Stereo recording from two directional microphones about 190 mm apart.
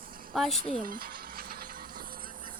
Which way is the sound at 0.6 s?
45° right (ahead or behind).